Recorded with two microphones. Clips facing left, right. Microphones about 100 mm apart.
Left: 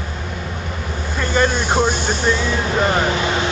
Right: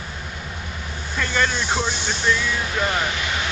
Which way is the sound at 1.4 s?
50° left (ahead or behind).